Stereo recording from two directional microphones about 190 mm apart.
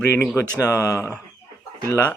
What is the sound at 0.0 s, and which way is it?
Speech, 10° left (ahead or behind).